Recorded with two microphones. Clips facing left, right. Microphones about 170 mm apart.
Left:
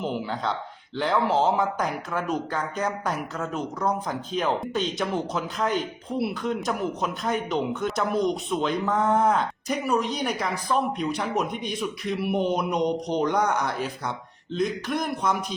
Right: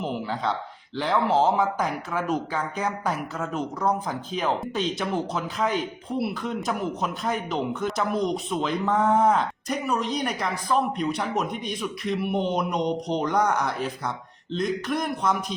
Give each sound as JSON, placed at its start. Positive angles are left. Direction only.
{"t": 0.0, "sound": "speech", "side_deg": 0}